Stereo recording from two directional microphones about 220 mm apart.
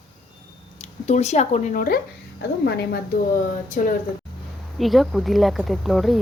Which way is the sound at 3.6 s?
35° left (ahead or behind).